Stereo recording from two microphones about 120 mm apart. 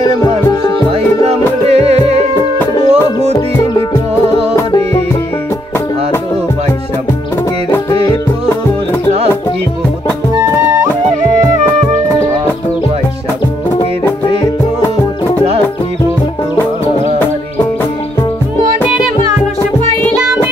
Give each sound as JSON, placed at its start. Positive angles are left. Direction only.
{"t": 0.9, "sound": "music", "side_deg": -60}
{"t": 10.4, "sound": "music", "side_deg": -25}